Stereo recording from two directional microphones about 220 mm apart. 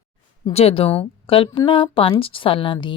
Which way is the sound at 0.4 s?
25° left (ahead or behind).